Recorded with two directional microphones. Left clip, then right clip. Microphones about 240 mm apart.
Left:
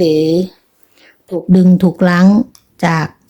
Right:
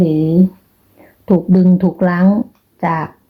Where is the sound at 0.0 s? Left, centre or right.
Left.